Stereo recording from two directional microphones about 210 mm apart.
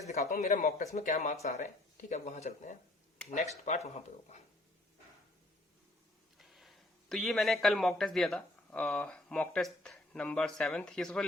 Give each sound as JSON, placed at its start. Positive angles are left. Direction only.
{"t": 0.1, "sound": "speech", "side_deg": 35}
{"t": 6.3, "sound": "a man's voice", "side_deg": 0}